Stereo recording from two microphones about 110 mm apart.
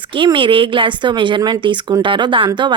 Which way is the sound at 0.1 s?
50° right (ahead or behind).